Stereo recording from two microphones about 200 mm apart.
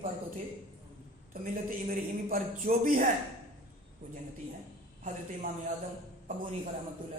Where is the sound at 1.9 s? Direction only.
45° right (ahead or behind).